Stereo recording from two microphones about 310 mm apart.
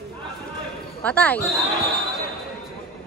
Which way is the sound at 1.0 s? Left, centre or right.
Centre.